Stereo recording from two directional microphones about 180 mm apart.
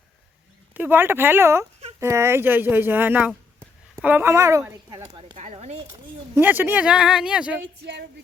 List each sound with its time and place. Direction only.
0.7 s speech: 10° right (ahead or behind)
5.0 s speech: 30° right (ahead or behind)
6.3 s speech: 10° right (ahead or behind)
7.6 s speech: 75° right (ahead or behind)